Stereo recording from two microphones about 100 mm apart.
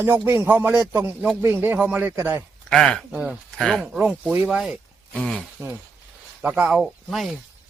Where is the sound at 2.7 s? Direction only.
5° left (ahead or behind).